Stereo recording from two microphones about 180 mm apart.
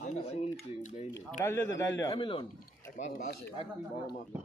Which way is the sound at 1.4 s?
15° left (ahead or behind).